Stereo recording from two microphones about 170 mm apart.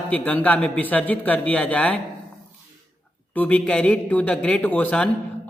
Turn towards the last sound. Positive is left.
turn(degrees=10)  # may be behind; listen again after turning